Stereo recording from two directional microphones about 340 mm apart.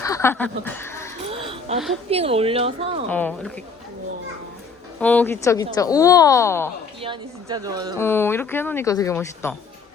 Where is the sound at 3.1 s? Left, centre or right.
Centre.